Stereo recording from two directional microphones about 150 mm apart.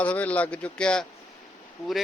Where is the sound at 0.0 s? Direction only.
10° left (ahead or behind).